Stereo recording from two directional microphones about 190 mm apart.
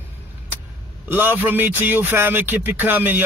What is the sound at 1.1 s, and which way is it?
Speech, 10° right (ahead or behind).